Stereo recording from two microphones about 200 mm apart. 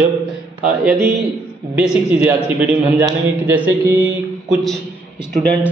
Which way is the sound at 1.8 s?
5° right (ahead or behind).